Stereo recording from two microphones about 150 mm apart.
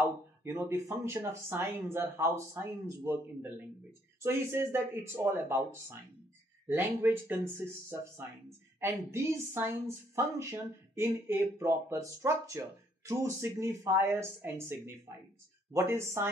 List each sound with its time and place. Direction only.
0.4 s speech: 15° right (ahead or behind)
7.0 s speech: 15° right (ahead or behind)